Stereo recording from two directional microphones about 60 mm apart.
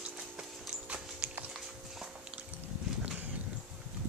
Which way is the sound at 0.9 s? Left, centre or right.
Right.